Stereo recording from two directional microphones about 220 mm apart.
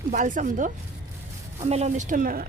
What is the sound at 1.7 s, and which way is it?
Speech, 30° right (ahead or behind).